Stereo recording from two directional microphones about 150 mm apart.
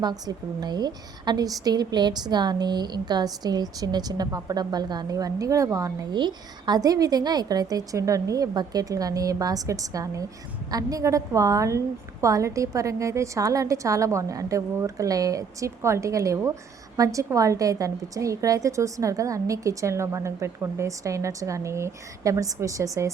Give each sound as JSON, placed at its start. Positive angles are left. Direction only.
{"t": 0.0, "sound": "a woman's voice", "side_deg": -25}